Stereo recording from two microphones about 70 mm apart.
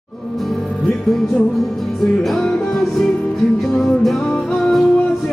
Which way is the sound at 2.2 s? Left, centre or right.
Centre.